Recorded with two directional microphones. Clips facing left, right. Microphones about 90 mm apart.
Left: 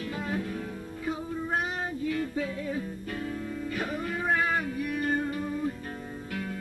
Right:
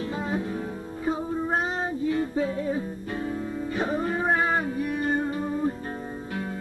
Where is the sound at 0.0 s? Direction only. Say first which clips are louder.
Right 4 dB; 25° right (ahead or behind).